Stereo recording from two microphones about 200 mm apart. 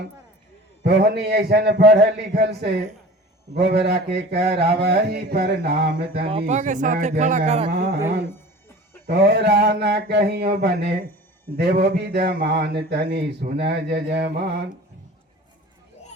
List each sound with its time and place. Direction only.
0.9 s a man's voice: 55° right (ahead or behind)
6.5 s speech: 40° right (ahead or behind)
7.7 s a man's voice: 55° right (ahead or behind)
9.0 s a man's voice: 55° right (ahead or behind)